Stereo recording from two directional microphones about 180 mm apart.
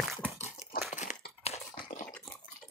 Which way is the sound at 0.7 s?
50° left (ahead or behind).